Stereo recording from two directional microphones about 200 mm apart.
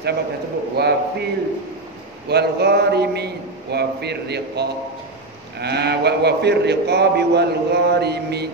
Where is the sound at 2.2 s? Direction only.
55° right (ahead or behind).